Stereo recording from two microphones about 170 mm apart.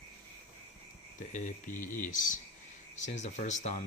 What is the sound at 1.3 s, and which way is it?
Speech, 50° left (ahead or behind).